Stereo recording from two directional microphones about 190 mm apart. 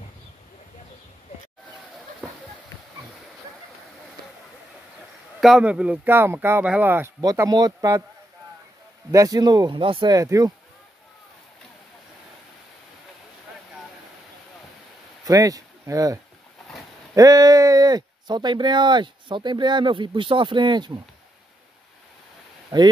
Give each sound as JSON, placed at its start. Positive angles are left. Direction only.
{"t": 5.4, "sound": "speech", "side_deg": -5}
{"t": 9.1, "sound": "speech", "side_deg": -20}
{"t": 15.2, "sound": "speech", "side_deg": -20}
{"t": 22.7, "sound": "speech", "side_deg": -20}